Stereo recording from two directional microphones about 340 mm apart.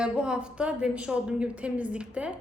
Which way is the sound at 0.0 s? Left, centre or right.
Centre.